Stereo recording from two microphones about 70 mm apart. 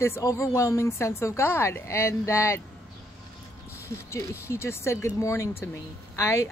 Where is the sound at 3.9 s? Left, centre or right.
Left.